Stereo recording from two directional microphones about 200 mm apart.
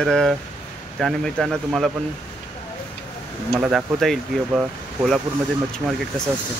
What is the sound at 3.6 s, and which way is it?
Speech, 5° right (ahead or behind).